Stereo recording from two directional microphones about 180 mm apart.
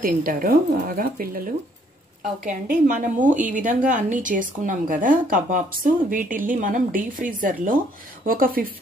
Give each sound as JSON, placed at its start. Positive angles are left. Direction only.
{"t": 0.0, "sound": "a woman's voice", "side_deg": -50}